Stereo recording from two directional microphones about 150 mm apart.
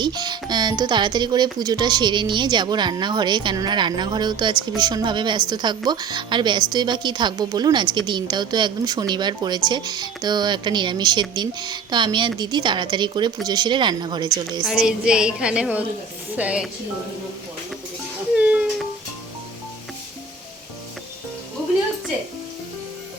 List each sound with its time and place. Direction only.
0.0 s speech: 30° right (ahead or behind)
14.6 s a woman's voice: 5° right (ahead or behind)
18.3 s a sound: 10° right (ahead or behind)